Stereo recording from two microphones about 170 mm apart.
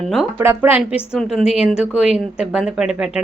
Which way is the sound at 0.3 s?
10° right (ahead or behind).